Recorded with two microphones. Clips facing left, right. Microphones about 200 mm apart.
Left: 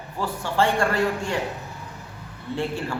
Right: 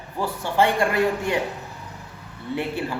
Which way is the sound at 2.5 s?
15° right (ahead or behind).